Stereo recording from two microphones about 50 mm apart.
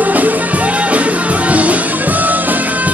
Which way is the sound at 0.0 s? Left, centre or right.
Right.